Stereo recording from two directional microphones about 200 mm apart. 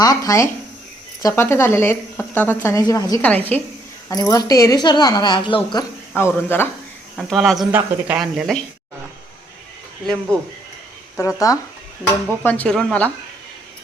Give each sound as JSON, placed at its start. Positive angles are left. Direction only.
{"t": 0.0, "sound": "a woman's voice", "side_deg": 15}
{"t": 6.1, "sound": "speech", "side_deg": 10}
{"t": 7.2, "sound": "speech", "side_deg": 0}
{"t": 11.2, "sound": "speech", "side_deg": 15}